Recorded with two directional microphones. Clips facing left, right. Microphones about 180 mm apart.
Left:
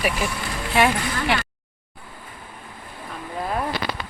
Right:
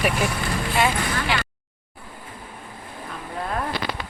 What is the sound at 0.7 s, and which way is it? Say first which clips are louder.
Speech: left 4 dB; 60° left (ahead or behind).